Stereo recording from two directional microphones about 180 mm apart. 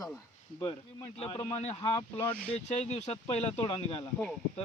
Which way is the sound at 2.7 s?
35° left (ahead or behind).